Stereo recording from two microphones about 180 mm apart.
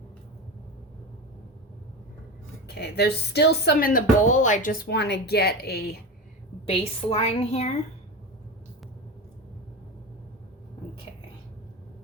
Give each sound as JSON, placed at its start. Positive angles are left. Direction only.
{"t": 2.6, "sound": "speech", "side_deg": 60}
{"t": 6.7, "sound": "a woman's voice", "side_deg": 35}